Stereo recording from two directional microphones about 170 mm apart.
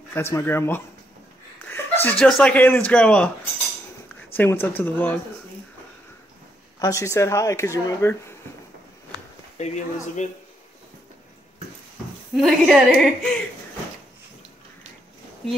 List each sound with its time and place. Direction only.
0.1 s speech: 15° left (ahead or behind)
4.4 s speech: 10° left (ahead or behind)
6.8 s speech: 15° left (ahead or behind)
9.6 s speech: 45° left (ahead or behind)
12.4 s a woman's voice: centre (ahead or behind)